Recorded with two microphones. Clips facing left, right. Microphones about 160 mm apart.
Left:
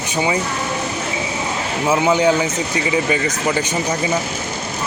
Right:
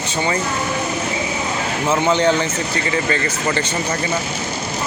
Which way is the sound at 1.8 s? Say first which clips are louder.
Left 1 dB; 10° left (ahead or behind).